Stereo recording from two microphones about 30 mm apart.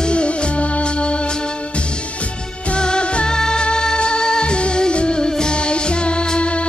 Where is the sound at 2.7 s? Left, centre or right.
Left.